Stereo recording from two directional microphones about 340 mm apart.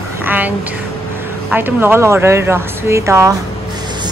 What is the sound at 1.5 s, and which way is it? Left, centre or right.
Speech, centre.